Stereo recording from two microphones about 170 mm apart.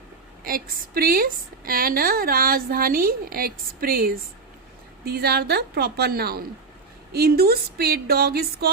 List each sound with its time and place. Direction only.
0.4 s a woman's voice: 60° right (ahead or behind)